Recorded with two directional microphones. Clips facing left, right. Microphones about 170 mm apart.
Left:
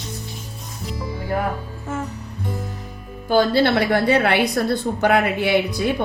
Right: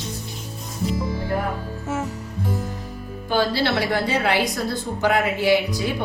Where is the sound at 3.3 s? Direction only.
55° left (ahead or behind).